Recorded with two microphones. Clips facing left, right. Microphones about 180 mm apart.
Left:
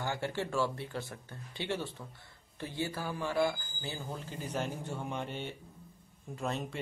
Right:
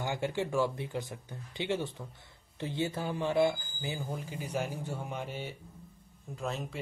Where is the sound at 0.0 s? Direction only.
15° right (ahead or behind).